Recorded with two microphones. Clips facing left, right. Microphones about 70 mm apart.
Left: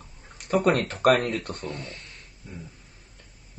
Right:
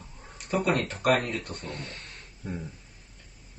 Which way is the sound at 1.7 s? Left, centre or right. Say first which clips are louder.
Left 1 dB; right.